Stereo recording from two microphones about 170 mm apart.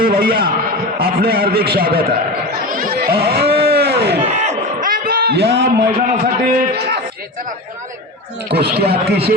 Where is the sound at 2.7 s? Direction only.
55° right (ahead or behind); by 4.2 s 75° right (ahead or behind).